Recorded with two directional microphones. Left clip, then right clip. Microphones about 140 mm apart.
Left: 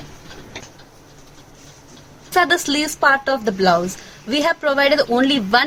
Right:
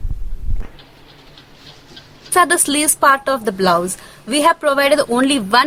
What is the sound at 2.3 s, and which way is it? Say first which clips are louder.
A woman's voice: right 2 dB; 25° right (ahead or behind).